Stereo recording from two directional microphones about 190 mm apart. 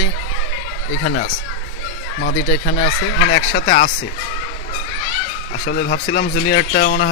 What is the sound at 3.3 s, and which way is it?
Speech, 45° left (ahead or behind).